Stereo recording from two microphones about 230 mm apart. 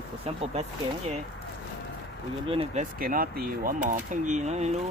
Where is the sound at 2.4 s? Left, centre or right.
Right.